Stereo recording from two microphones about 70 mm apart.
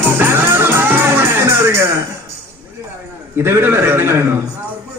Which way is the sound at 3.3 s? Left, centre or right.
Right.